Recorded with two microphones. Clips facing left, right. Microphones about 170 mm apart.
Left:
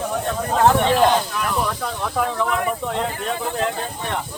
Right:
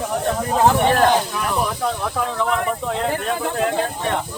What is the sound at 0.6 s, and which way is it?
Speech, 5° right (ahead or behind).